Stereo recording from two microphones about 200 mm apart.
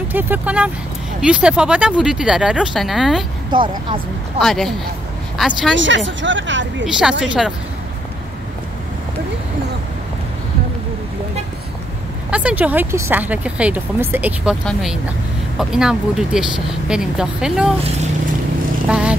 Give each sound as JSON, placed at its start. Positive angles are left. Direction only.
{"t": 0.1, "sound": "speech", "side_deg": -10}
{"t": 3.5, "sound": "speech", "side_deg": -25}
{"t": 4.4, "sound": "speech", "side_deg": 0}
{"t": 5.8, "sound": "speech", "side_deg": -65}
{"t": 6.9, "sound": "speech", "side_deg": -5}
{"t": 12.3, "sound": "speech", "side_deg": -5}
{"t": 17.8, "sound": "speech", "side_deg": -35}
{"t": 18.9, "sound": "speech", "side_deg": -5}